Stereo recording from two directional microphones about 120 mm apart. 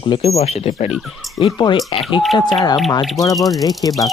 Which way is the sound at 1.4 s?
40° left (ahead or behind).